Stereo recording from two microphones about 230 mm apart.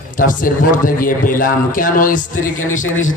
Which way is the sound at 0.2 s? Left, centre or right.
Left.